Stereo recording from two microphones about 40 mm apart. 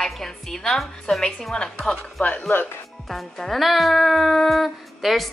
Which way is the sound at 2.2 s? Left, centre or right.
Left.